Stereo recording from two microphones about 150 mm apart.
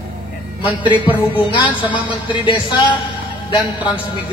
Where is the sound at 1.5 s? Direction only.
35° left (ahead or behind).